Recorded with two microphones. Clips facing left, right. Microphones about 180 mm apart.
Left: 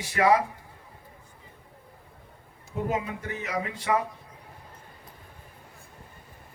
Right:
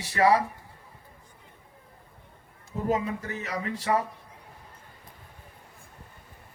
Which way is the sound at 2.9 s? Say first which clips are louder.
Right 5 dB; 35° right (ahead or behind).